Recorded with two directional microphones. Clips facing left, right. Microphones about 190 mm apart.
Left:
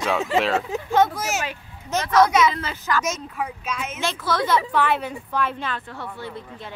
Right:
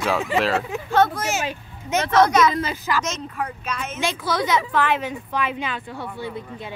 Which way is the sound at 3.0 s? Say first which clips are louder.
Even; 5° left (ahead or behind).